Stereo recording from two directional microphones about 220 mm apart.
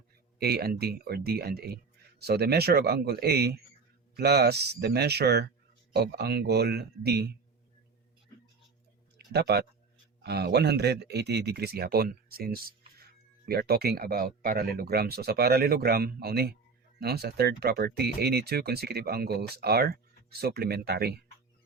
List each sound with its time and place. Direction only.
0.3 s speech: 45° right (ahead or behind)
9.1 s speech: 50° right (ahead or behind)